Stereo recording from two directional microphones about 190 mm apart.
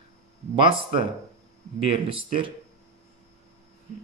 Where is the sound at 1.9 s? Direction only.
25° right (ahead or behind).